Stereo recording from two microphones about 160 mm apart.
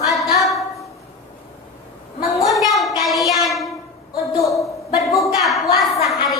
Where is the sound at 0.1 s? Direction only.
Centre (ahead or behind).